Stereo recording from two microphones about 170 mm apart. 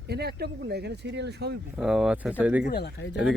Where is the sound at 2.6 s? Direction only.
70° left (ahead or behind).